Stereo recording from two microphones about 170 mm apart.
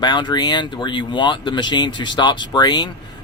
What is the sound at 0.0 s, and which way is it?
Speech, 25° left (ahead or behind).